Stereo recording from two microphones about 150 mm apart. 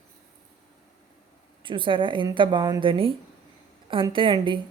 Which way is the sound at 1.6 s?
35° right (ahead or behind).